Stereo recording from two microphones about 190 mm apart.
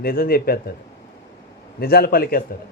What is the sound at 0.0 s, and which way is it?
Speech, 50° left (ahead or behind).